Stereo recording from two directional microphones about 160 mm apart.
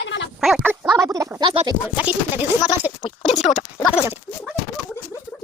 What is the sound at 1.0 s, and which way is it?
Speech, 20° right (ahead or behind).